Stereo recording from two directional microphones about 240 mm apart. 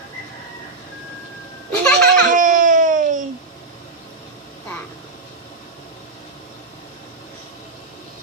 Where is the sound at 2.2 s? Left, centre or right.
Right.